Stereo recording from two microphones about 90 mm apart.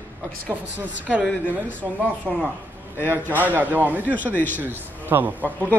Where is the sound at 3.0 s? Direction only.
25° left (ahead or behind).